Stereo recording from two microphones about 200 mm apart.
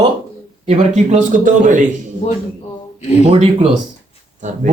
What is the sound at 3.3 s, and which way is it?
Speech, 30° right (ahead or behind).